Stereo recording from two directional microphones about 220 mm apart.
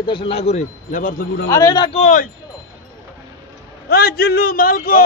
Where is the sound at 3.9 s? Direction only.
45° left (ahead or behind).